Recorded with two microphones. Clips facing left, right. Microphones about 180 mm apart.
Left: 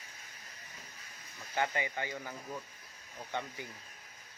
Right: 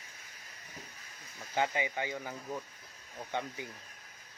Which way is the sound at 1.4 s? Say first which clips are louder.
Right 2 dB; 15° right (ahead or behind).